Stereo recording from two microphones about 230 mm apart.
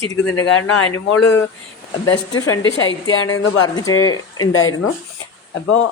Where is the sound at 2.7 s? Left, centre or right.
Left.